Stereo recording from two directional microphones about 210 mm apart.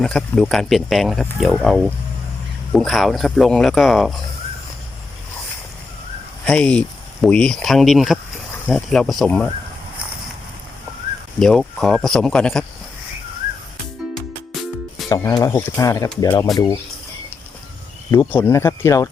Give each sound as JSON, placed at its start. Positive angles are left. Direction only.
{"t": 0.0, "sound": "speech", "side_deg": 5}
{"t": 6.4, "sound": "speech", "side_deg": 5}
{"t": 11.3, "sound": "speech", "side_deg": 0}
{"t": 15.1, "sound": "speech", "side_deg": 15}
{"t": 18.1, "sound": "speech", "side_deg": 10}